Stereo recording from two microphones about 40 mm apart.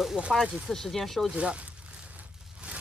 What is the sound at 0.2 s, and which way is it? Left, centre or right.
Speech, right.